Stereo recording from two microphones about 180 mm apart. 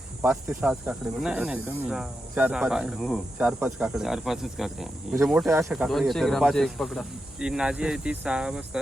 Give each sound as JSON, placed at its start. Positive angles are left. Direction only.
{"t": 0.2, "sound": "snake", "side_deg": -5}
{"t": 5.1, "sound": "speech", "side_deg": -15}
{"t": 5.7, "sound": "snake", "side_deg": 0}